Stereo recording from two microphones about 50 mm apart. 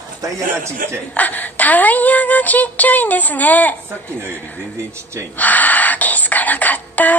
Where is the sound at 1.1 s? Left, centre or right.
Left.